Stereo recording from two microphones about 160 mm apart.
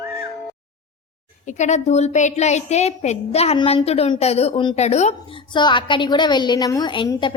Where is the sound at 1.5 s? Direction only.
45° left (ahead or behind).